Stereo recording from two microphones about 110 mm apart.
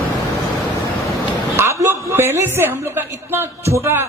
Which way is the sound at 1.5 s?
25° right (ahead or behind).